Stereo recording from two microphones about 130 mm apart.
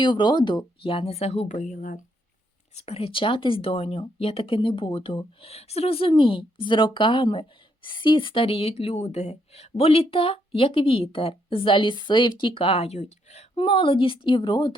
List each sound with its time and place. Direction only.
0.0 s speech: 35° left (ahead or behind); by 2.0 s 90° left
2.7 s speech: 50° left (ahead or behind)
13.6 s a woman's voice: 40° left (ahead or behind)